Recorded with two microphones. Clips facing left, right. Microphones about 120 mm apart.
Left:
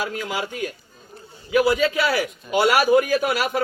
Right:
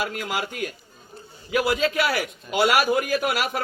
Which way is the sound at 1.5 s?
55° right (ahead or behind).